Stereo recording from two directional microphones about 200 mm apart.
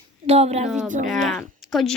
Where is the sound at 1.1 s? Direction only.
Centre (ahead or behind).